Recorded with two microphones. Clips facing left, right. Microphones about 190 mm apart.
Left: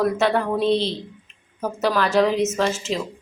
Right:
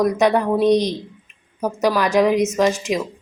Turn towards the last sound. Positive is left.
turn(degrees=-15)  # may be behind; listen again after turning